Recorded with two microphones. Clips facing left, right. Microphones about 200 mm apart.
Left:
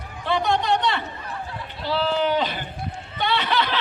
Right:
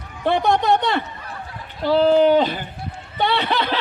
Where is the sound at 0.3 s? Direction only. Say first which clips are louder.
Right 4 dB; 50° right (ahead or behind).